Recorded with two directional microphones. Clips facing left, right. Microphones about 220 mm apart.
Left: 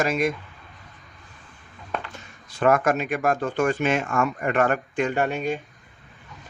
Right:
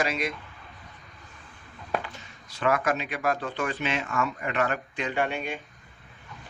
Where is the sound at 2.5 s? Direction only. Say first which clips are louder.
Left 6 dB; 45° left (ahead or behind).